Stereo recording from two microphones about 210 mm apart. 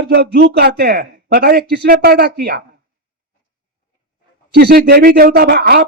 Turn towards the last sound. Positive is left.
turn(degrees=-50)  # may be behind; listen again after turning